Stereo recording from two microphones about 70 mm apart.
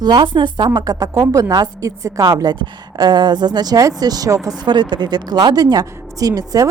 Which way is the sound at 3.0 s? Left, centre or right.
Right.